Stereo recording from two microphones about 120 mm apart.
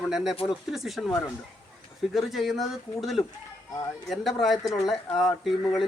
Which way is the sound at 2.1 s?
Centre (ahead or behind).